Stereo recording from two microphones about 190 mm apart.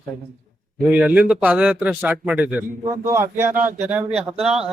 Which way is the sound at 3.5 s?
45° right (ahead or behind).